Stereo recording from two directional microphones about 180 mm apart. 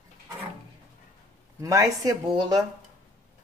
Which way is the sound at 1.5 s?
20° right (ahead or behind).